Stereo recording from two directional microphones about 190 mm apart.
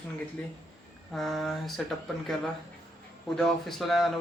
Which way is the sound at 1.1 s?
Centre (ahead or behind).